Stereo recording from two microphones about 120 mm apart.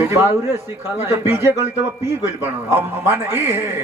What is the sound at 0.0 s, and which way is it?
A man's voice, 20° right (ahead or behind).